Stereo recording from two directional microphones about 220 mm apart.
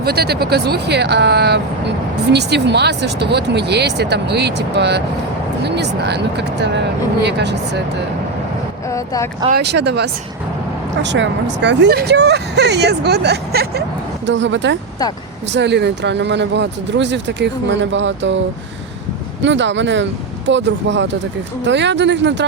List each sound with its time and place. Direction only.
0.0 s speech: 45° right (ahead or behind)
8.9 s boat: 15° left (ahead or behind)
9.5 s speech: 50° right (ahead or behind)
19.4 s speech: 55° right (ahead or behind)